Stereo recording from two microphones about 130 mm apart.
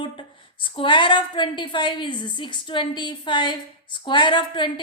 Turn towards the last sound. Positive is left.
turn(degrees=35)  # may be behind; listen again after turning